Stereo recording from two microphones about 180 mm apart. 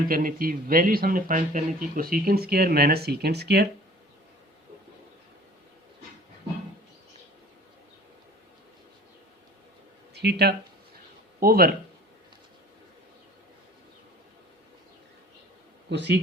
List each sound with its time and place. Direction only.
0.1 s speech: 50° right (ahead or behind); by 3.7 s 65° right (ahead or behind)
10.2 s speech: 65° right (ahead or behind)
15.9 s speech: 75° right (ahead or behind)